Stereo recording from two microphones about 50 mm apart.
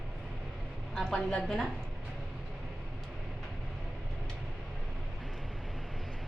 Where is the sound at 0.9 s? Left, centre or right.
Centre.